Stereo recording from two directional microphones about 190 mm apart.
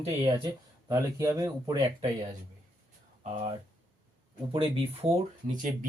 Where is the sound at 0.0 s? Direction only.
30° right (ahead or behind).